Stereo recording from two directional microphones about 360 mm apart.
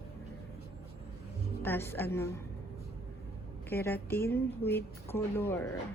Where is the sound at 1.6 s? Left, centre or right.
Centre.